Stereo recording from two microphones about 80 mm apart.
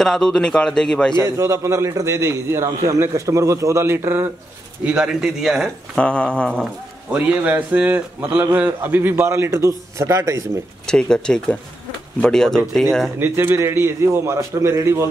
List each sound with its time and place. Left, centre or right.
0.0 s a man's voice: centre
1.2 s a man's voice: right
4.8 s a man's voice: centre
5.9 s a man's voice: centre
7.1 s a man's voice: centre; by 10.6 s right
10.9 s a man's voice: centre
13.2 s a man's voice: right